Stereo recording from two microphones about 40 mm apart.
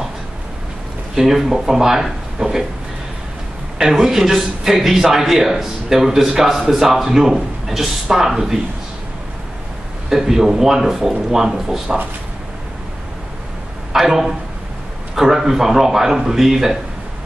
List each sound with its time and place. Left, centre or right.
1.1 s a man's voice: centre
2.3 s a sound: centre
3.9 s a man's voice: centre
10.0 s a man's voice: centre
13.9 s a man's voice: centre